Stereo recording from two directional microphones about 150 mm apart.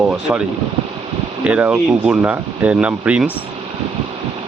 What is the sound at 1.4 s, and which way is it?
Speech, 10° right (ahead or behind).